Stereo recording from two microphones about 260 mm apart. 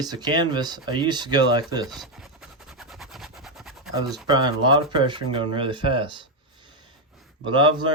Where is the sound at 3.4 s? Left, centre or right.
Centre.